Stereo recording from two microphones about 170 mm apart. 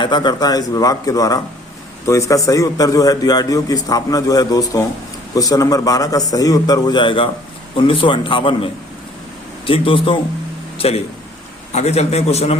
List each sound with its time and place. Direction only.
0.0 s a man's voice: 25° left (ahead or behind)